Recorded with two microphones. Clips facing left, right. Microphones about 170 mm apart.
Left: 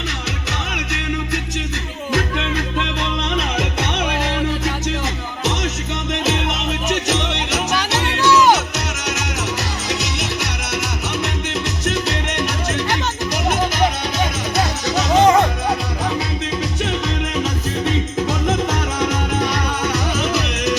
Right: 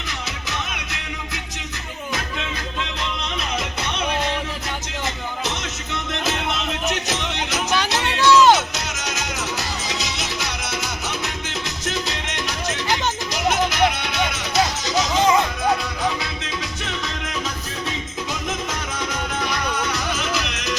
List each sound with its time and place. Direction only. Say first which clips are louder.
2.1 s music: left 9 dB; 65° left (ahead or behind)
7.8 s music: left 2 dB; 10° left (ahead or behind)
8.7 s music: left 4 dB; 70° left (ahead or behind)
11.9 s music: left 5 dB; 70° left (ahead or behind)
14.5 s music: right 1 dB; 65° left (ahead or behind)